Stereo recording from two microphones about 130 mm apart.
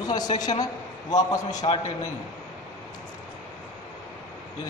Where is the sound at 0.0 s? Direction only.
30° left (ahead or behind).